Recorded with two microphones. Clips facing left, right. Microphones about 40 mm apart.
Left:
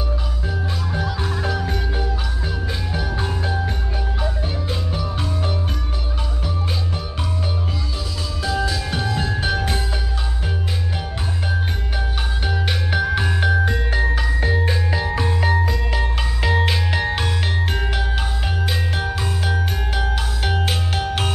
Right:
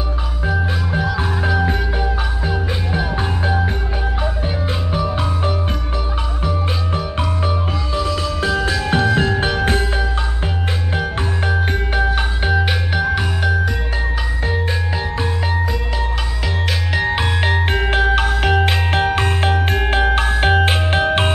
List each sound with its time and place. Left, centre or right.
1.4 s music: right
4.9 s music: right
7.2 s music: right
12.5 s music: centre
13.1 s music: centre
16.4 s music: centre
17.1 s music: right